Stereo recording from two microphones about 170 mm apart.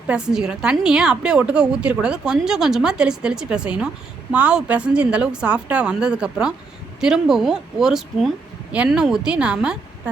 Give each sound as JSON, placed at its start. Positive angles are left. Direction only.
{"t": 0.1, "sound": "a woman's voice", "side_deg": -5}